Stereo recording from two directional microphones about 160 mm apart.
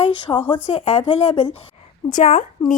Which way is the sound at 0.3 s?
15° left (ahead or behind).